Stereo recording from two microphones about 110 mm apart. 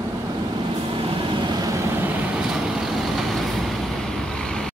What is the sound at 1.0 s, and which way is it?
Vehicle, 40° right (ahead or behind).